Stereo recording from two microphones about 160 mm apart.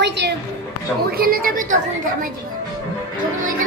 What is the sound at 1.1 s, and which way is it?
A woman's voice, 70° right (ahead or behind).